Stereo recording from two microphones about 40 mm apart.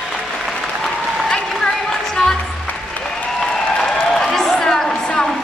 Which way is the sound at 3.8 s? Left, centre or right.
Centre.